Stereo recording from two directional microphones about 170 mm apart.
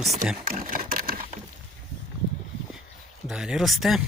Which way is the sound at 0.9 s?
55° right (ahead or behind).